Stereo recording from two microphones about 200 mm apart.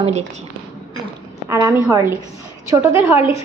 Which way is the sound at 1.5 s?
15° right (ahead or behind).